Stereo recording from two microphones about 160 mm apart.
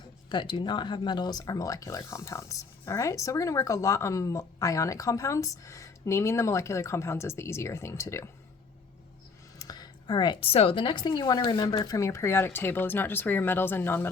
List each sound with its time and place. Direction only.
0.3 s speech: 30° left (ahead or behind)
9.6 s a woman's voice: 25° left (ahead or behind)